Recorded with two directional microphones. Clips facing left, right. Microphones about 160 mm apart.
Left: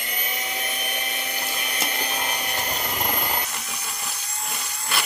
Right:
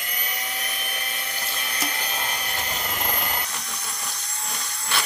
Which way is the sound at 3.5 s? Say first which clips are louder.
Left 1 dB; 5° left (ahead or behind).